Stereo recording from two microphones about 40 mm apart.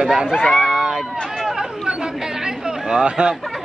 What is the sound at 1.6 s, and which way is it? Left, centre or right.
Chatter, centre.